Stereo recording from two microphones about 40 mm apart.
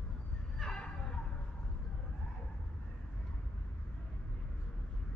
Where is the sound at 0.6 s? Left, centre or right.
Left.